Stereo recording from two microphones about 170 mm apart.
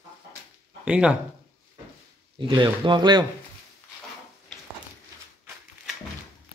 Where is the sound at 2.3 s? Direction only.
30° right (ahead or behind).